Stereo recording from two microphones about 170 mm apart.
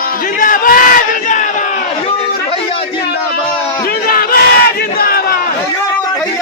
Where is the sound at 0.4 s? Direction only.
55° left (ahead or behind).